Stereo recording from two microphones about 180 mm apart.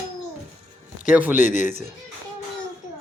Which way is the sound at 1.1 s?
10° right (ahead or behind).